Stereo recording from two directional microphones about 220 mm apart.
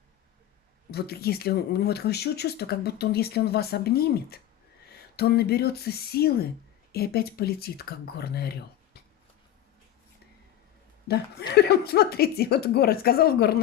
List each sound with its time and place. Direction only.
0.9 s speech: 45° left (ahead or behind)
11.3 s speech: 45° left (ahead or behind)